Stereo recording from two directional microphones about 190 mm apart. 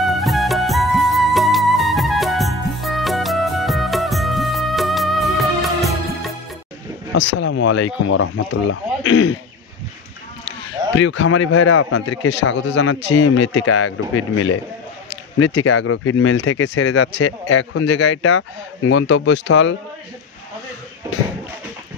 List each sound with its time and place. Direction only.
0.0 s music: centre (ahead or behind)
7.2 s speech: 70° left (ahead or behind)
11.0 s speech: 80° left